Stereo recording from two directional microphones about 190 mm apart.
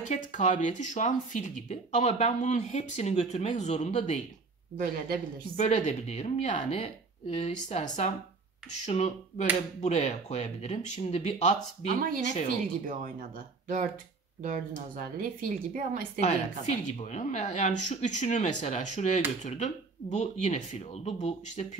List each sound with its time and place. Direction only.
0.1 s speech: 40° left (ahead or behind)
4.7 s speech: 50° right (ahead or behind)
5.6 s speech: 40° left (ahead or behind)
12.0 s speech: 45° right (ahead or behind)
14.4 s speech: 45° right (ahead or behind)
16.2 s speech: 35° left (ahead or behind)